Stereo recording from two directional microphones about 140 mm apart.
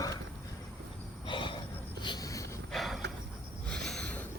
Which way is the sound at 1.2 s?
35° left (ahead or behind).